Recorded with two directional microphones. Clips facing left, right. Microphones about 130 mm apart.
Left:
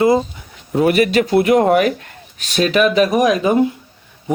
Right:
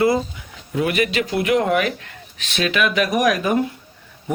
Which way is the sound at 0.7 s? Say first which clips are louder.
Left 6 dB; 40° left (ahead or behind).